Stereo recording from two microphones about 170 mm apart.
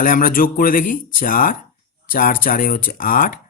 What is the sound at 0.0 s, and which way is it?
Speech, 55° left (ahead or behind).